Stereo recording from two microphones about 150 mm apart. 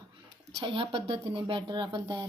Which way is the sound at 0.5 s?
30° right (ahead or behind).